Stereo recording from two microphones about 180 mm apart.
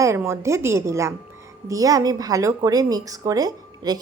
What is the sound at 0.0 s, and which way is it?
A woman's voice, 15° right (ahead or behind).